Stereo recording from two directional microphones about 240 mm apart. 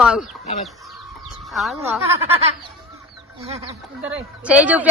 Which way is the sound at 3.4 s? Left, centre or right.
Right.